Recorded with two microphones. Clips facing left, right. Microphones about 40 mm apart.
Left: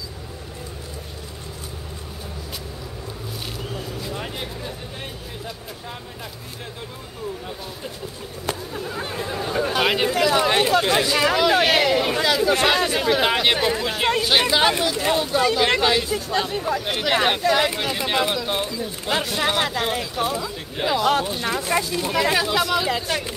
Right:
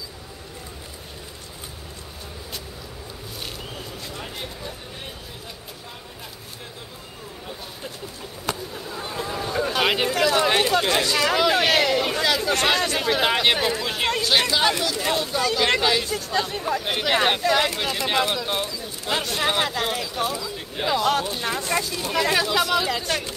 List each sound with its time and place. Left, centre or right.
8.7 s a sound: left
9.1 s chatter: centre
11.3 s speech: centre
14.2 s speech: centre
18.6 s speech: centre
19.0 s speech: centre